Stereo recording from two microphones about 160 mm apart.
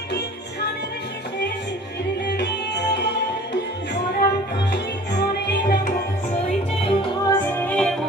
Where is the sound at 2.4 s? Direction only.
90° left.